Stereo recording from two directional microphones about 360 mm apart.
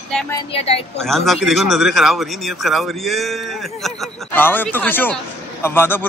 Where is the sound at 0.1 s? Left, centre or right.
Centre.